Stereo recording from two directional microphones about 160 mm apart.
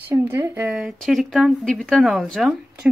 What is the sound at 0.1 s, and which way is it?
Speech, 15° right (ahead or behind).